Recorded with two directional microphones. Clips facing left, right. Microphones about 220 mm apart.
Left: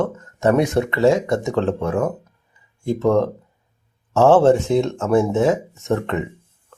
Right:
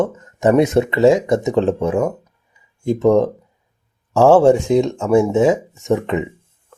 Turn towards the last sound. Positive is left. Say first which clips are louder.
# right 3 dB
turn(degrees=-15)  # may be behind; listen again after turning